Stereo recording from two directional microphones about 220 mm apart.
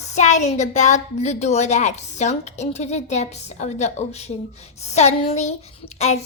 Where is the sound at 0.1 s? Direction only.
30° left (ahead or behind).